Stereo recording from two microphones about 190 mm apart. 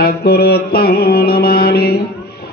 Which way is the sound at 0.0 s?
55° left (ahead or behind).